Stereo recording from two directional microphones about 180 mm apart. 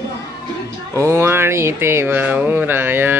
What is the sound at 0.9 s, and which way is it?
Music, 15° right (ahead or behind).